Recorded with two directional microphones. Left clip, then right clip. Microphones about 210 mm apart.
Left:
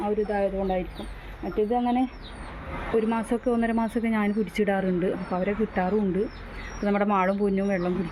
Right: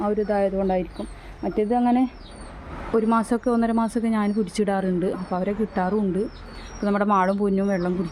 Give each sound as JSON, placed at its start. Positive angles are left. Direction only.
{"t": 0.0, "sound": "speech", "side_deg": -20}
{"t": 3.1, "sound": "speech", "side_deg": -20}